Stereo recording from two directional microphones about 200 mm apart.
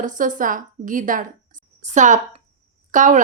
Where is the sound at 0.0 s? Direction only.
40° right (ahead or behind).